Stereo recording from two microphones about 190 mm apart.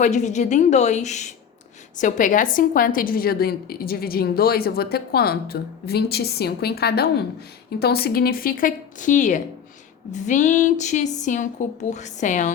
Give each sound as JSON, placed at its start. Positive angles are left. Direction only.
{"t": 0.0, "sound": "a woman's voice", "side_deg": 40}